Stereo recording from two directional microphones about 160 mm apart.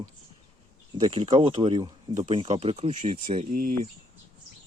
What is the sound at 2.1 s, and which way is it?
Speech, 45° right (ahead or behind).